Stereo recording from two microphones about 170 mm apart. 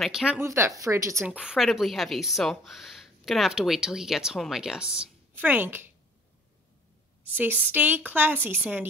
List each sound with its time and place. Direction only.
0.0 s speech: 5° right (ahead or behind)
0.4 s a woman's voice: 15° right (ahead or behind)
7.2 s a woman's voice: 10° right (ahead or behind)